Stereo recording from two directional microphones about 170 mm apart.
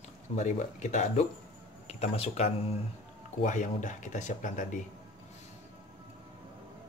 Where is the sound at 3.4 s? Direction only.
45° left (ahead or behind).